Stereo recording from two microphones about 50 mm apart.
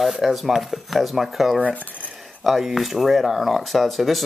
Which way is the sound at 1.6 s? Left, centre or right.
Left.